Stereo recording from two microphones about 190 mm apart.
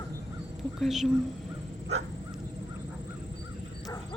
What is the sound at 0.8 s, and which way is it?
Speech, centre (ahead or behind).